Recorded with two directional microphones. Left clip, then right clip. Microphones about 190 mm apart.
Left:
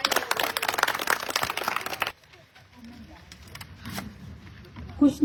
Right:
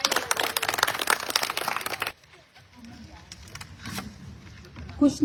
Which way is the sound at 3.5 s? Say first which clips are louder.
Right 1 dB; 65° left (ahead or behind).